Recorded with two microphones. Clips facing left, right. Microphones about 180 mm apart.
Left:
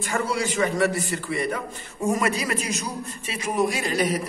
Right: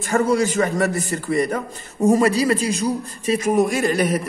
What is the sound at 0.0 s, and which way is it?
A man's voice, 45° right (ahead or behind).